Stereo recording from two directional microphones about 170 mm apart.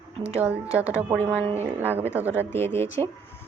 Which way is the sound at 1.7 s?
10° right (ahead or behind).